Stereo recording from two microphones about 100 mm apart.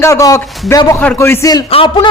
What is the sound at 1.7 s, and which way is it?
Speech, 60° left (ahead or behind).